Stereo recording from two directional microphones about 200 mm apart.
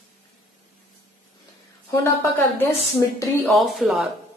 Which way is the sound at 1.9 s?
10° left (ahead or behind).